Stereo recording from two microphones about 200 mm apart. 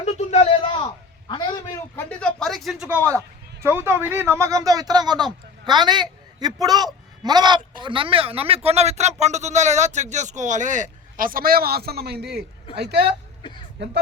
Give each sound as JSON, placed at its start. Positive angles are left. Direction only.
{"t": 0.0, "sound": "a sound", "side_deg": 35}
{"t": 1.3, "sound": "a man's voice", "side_deg": 20}
{"t": 2.0, "sound": "a man's voice", "side_deg": 5}